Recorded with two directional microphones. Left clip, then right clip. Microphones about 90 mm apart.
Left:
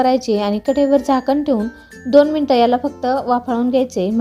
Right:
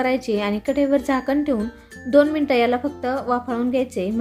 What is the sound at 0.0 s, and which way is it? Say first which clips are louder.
Speech: left 6 dB; 90° left.